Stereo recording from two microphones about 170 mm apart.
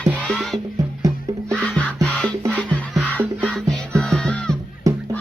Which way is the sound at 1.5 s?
5° left (ahead or behind).